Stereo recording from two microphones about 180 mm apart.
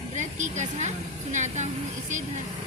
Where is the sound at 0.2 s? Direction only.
40° right (ahead or behind).